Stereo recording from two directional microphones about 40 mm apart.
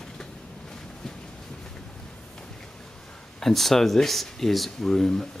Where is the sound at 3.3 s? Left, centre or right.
Centre.